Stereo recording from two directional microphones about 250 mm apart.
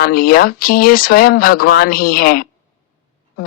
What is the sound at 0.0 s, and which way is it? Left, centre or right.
Speech, left.